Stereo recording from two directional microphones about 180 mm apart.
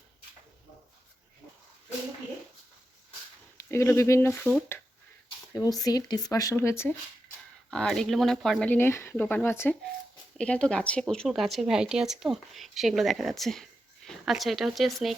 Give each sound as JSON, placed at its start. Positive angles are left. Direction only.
{"t": 3.7, "sound": "speech", "side_deg": 15}
{"t": 5.5, "sound": "speech", "side_deg": 20}
{"t": 7.7, "sound": "speech", "side_deg": 5}